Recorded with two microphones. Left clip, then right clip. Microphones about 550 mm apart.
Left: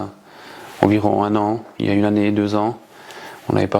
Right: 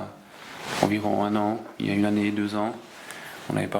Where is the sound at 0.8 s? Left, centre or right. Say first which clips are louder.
Left 9 dB; left.